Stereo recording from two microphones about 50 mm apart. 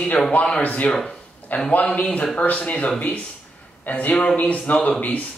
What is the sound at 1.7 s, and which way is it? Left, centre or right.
A man's voice, left.